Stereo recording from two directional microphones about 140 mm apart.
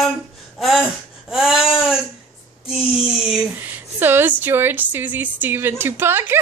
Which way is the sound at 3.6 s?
15° right (ahead or behind).